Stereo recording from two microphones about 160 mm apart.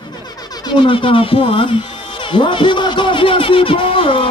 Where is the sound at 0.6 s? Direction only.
30° left (ahead or behind).